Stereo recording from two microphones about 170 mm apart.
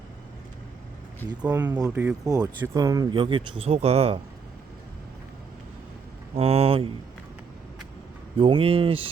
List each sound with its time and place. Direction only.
1.2 s speech: 10° left (ahead or behind)
1.7 s speech: 15° right (ahead or behind); by 4.2 s 35° right (ahead or behind)
6.3 s speech: 35° right (ahead or behind)
8.4 s speech: 30° right (ahead or behind)